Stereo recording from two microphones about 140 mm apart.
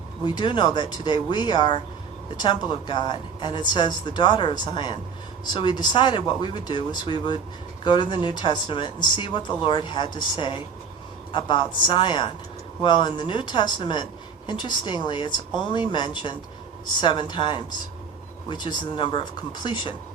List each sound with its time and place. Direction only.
0.3 s a woman's voice: 35° left (ahead or behind)